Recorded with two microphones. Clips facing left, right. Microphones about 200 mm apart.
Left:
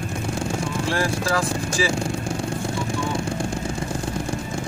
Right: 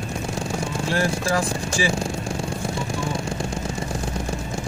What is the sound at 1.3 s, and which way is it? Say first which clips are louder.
Speech: even; 20° right (ahead or behind).